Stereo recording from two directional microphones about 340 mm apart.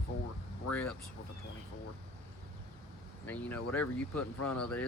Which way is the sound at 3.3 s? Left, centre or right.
Centre.